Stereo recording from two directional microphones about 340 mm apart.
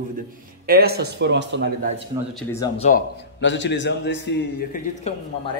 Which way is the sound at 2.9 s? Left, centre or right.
Left.